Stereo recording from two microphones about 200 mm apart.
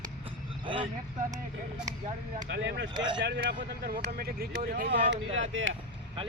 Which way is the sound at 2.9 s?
20° right (ahead or behind).